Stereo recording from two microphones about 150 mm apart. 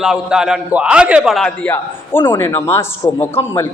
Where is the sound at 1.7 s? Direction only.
15° left (ahead or behind).